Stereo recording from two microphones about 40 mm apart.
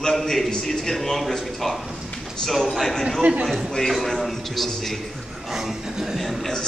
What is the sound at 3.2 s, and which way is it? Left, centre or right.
Speech, right.